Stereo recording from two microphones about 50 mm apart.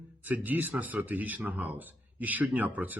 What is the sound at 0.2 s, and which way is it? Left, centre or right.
Speech, right.